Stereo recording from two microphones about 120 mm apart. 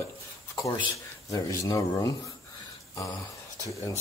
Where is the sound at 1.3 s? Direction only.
25° left (ahead or behind).